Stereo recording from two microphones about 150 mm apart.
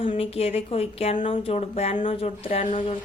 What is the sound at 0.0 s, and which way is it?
A woman's voice, 40° left (ahead or behind).